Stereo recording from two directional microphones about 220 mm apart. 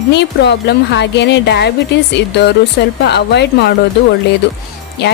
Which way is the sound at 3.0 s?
50° left (ahead or behind).